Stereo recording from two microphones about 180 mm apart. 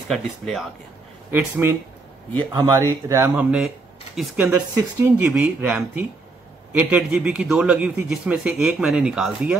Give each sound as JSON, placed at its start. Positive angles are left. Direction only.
{"t": 0.1, "sound": "a man's voice", "side_deg": 0}
{"t": 1.3, "sound": "speech", "side_deg": -15}
{"t": 3.5, "sound": "speech", "side_deg": 0}
{"t": 4.5, "sound": "a man's voice", "side_deg": -15}